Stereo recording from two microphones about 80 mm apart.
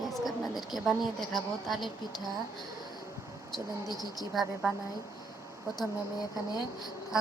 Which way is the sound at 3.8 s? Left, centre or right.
Left.